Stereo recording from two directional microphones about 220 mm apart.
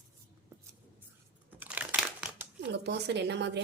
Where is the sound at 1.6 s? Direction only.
5° right (ahead or behind).